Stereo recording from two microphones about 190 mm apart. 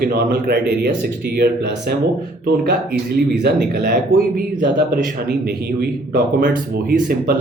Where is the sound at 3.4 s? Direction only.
60° right (ahead or behind).